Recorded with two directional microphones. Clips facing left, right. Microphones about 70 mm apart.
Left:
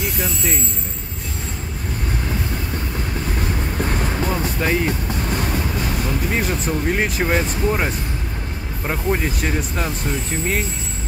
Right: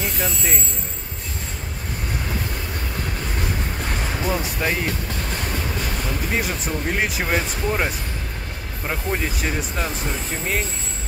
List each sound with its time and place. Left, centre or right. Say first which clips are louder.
3.8 s vehicle: left 6 dB; centre
4.4 s speech: left 4 dB; centre
6.3 s speech: left 2 dB; centre